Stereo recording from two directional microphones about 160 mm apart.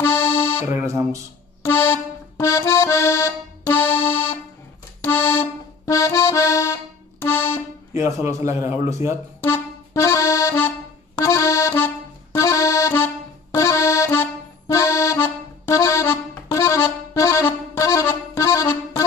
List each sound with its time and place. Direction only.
0.0 s music: 15° left (ahead or behind)
0.7 s speech: 15° right (ahead or behind)
1.6 s accordion: 15° left (ahead or behind)
7.9 s a man's voice: 20° right (ahead or behind)
9.4 s accordion: 15° left (ahead or behind)